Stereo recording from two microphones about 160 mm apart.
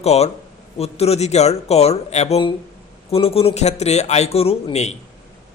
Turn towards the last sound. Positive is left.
turn(degrees=40)  # may be behind; listen again after turning